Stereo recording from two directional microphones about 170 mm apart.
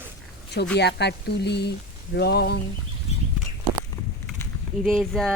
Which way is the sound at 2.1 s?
70° left (ahead or behind).